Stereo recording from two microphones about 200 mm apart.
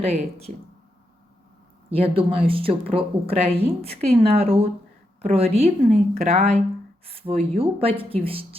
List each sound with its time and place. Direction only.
0.0 s a woman's voice: 30° right (ahead or behind)
1.9 s a woman's voice: 30° right (ahead or behind)